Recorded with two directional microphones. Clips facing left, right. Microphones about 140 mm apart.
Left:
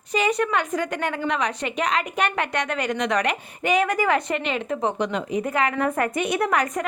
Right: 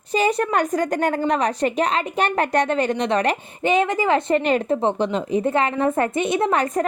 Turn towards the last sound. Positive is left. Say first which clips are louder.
# right 3 dB
turn(degrees=-30)  # may be behind; listen again after turning